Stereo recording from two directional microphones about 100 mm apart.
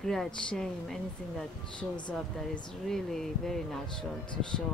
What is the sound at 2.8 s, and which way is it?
A woman's voice, 5° left (ahead or behind).